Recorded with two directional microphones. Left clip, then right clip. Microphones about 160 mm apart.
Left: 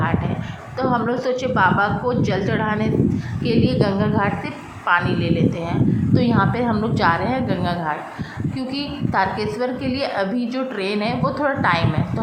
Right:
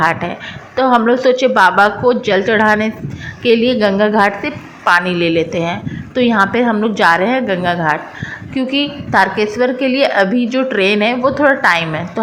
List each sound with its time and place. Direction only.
0.0 s a woman's voice: 35° right (ahead or behind)